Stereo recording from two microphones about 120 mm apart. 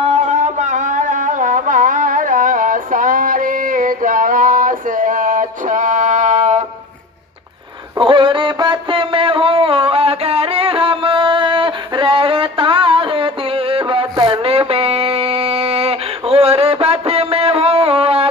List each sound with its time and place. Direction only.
0.0 s carnatic music: 70° right (ahead or behind); by 3.4 s 90° right
4.6 s a sound: 90° right
8.0 s music: 45° right (ahead or behind)